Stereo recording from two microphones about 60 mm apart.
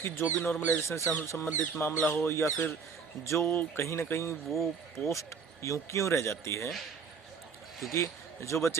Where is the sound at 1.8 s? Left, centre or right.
Left.